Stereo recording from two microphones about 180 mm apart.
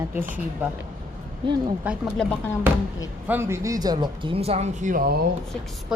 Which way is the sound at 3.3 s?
15° right (ahead or behind).